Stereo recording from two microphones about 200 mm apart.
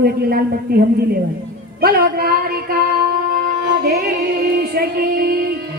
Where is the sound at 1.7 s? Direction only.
50° right (ahead or behind).